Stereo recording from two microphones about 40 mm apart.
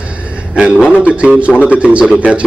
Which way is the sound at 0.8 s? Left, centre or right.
Right.